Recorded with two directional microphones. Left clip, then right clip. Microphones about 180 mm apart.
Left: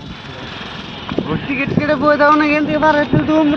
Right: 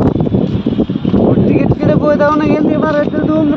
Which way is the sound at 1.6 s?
80° right.